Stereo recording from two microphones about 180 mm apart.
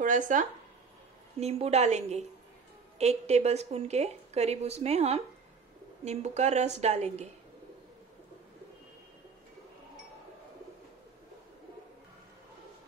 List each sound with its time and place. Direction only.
0.0 s speech: 45° right (ahead or behind)
1.4 s a woman's voice: 35° right (ahead or behind)